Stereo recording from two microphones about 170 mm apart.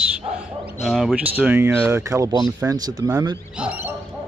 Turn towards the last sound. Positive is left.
turn(degrees=-10)  # may be behind; listen again after turning